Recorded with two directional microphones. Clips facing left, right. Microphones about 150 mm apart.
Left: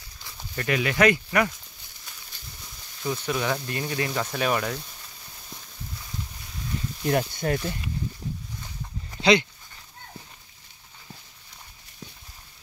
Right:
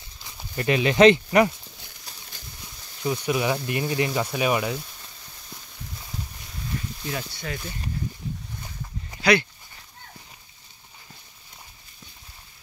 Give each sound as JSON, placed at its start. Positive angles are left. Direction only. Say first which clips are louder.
{"t": 0.2, "sound": "speech", "louder": "right 3 dB", "side_deg": -20}
{"t": 3.0, "sound": "speech", "louder": "right 3 dB", "side_deg": -15}
{"t": 7.1, "sound": "speech", "louder": "left 9 dB", "side_deg": 50}
{"t": 9.2, "sound": "speech", "louder": "left 1 dB", "side_deg": 20}